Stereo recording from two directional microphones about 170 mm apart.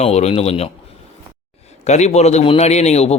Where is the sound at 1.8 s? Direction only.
40° left (ahead or behind).